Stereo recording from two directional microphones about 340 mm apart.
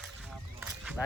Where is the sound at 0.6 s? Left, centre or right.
Centre.